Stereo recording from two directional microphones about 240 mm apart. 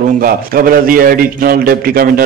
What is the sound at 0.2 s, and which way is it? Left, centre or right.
A man's voice, right.